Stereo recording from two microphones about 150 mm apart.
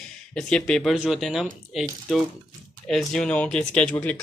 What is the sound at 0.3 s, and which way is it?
Speech, 5° left (ahead or behind).